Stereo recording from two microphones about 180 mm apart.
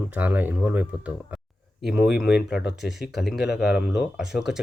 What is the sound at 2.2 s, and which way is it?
Speech, 70° left (ahead or behind).